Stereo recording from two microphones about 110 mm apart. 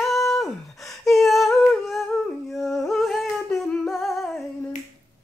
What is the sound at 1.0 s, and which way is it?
Humming, centre (ahead or behind).